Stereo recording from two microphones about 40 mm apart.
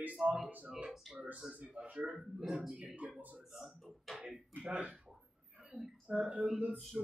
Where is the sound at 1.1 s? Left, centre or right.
Right.